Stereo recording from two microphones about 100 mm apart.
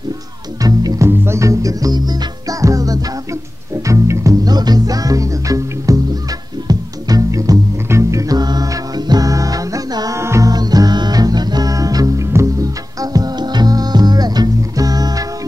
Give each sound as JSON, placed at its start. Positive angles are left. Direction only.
{"t": 0.7, "sound": "music", "side_deg": -40}
{"t": 1.0, "sound": "music", "side_deg": -25}
{"t": 10.5, "sound": "music", "side_deg": -40}